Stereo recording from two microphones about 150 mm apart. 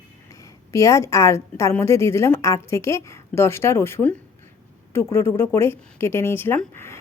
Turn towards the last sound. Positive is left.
turn(degrees=15)  # may be behind; listen again after turning